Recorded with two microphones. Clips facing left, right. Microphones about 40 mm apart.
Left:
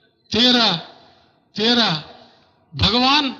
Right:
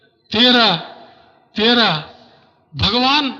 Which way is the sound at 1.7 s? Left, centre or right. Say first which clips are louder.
Right 4 dB; right.